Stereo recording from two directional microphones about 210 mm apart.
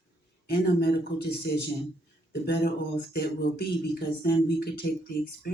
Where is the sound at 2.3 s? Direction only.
55° left (ahead or behind).